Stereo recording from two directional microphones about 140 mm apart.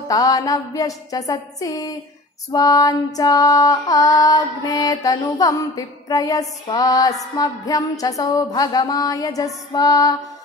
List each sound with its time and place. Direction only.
0.1 s female singing: 25° left (ahead or behind)